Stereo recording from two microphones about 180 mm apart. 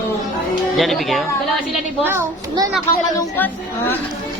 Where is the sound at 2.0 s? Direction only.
15° right (ahead or behind).